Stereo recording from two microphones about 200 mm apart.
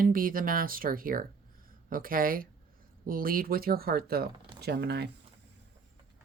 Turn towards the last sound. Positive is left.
turn(degrees=-55)  # may be behind; listen again after turning